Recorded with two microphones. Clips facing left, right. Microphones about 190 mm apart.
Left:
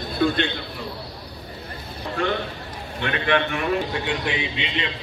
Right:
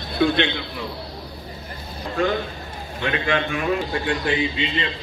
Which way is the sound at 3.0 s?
55° left (ahead or behind).